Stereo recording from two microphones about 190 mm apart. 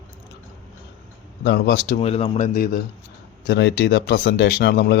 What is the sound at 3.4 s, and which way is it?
Speech, 65° left (ahead or behind).